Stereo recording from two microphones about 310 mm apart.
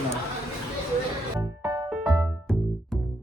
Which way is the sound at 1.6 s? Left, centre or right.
Centre.